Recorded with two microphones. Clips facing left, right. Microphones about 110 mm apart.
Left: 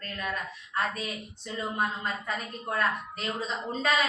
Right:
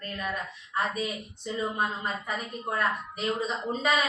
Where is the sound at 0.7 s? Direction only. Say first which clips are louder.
Right 2 dB; 15° right (ahead or behind).